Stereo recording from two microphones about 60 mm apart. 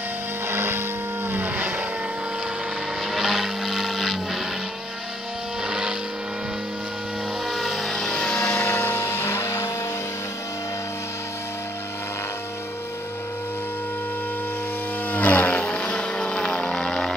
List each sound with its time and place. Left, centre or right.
0.5 s vehicle: right
1.3 s vehicle: right
3.1 s vehicle: centre
5.7 s vehicle: centre
7.4 s vehicle: centre
8.6 s vehicle: left
15.0 s vehicle: left